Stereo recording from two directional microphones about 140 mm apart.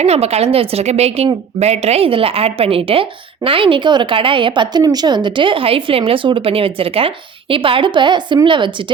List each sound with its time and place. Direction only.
0.0 s a woman's voice: 50° right (ahead or behind)